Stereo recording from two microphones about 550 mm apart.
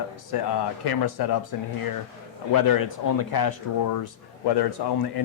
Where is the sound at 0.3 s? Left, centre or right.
Left.